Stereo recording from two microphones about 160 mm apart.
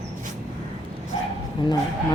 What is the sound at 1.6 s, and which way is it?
Speech, 30° left (ahead or behind).